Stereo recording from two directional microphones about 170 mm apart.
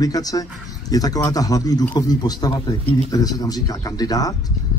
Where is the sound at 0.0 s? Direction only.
20° left (ahead or behind).